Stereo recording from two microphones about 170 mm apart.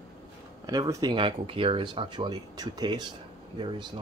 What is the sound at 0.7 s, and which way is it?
Speech, 20° right (ahead or behind).